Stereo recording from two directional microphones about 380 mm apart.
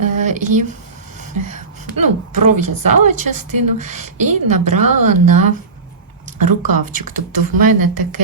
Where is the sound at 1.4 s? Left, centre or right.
Right.